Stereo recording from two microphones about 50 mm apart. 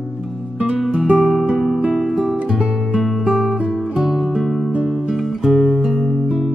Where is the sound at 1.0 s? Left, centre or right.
Right.